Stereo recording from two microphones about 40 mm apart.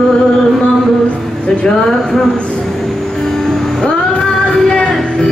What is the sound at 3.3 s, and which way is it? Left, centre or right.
Music, centre.